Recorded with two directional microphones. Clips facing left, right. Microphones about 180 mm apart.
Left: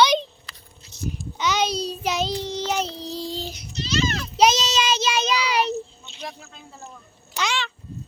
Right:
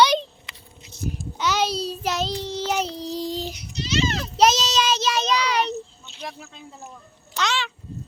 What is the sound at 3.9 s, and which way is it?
Children playing, 25° right (ahead or behind).